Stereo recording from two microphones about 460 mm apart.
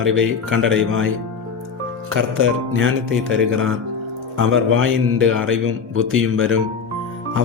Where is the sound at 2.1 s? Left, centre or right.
Right.